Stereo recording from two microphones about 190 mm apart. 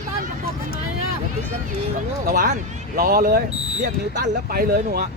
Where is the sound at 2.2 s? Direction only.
45° right (ahead or behind).